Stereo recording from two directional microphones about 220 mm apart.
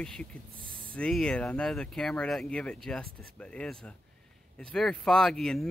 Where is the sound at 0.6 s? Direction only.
25° right (ahead or behind).